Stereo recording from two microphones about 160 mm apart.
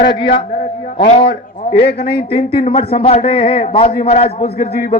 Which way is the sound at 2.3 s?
35° left (ahead or behind).